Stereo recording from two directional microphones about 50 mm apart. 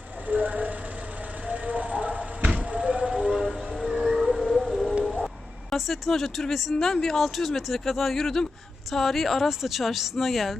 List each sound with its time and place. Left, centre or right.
0.3 s speech: right
1.5 s a sound: right; by 4.9 s centre
5.0 s vehicle: centre
5.7 s speech: centre